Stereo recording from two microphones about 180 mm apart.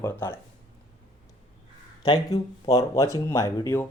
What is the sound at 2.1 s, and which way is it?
Speech, 20° left (ahead or behind).